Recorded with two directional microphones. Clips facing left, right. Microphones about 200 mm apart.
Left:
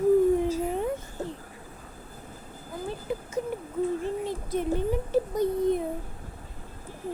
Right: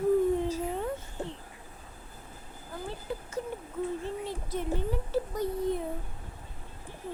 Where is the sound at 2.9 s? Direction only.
15° left (ahead or behind).